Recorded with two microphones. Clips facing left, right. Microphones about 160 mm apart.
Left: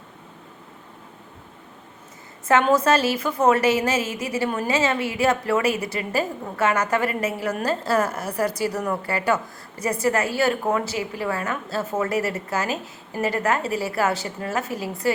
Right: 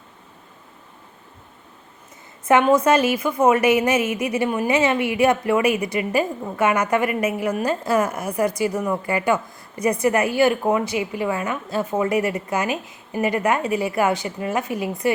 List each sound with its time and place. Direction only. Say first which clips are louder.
2.5 s a woman's voice: right 2 dB; 15° right (ahead or behind)